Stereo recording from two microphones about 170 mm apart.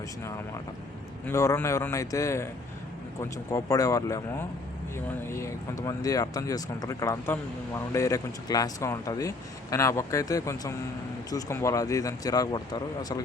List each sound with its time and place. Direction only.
1.3 s a man's voice: 15° left (ahead or behind)